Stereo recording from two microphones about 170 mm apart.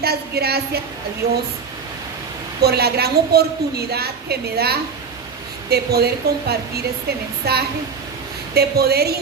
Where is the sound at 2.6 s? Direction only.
70° right (ahead or behind).